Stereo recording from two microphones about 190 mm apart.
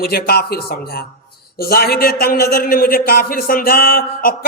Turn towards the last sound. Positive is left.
turn(degrees=50)  # may be behind; listen again after turning